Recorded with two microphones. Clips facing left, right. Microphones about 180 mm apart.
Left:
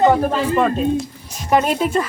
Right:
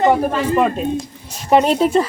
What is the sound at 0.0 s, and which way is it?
Speech, 10° right (ahead or behind).